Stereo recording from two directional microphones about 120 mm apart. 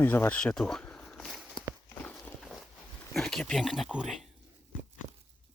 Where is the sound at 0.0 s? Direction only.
15° left (ahead or behind); by 1.6 s centre (ahead or behind).